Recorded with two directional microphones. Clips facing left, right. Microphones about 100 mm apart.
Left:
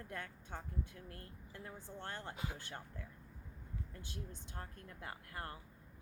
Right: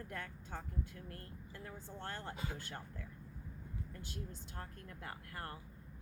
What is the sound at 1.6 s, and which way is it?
A woman's voice, 20° left (ahead or behind).